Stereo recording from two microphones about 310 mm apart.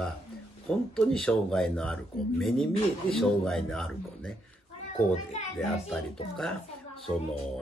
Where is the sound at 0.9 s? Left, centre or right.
Centre.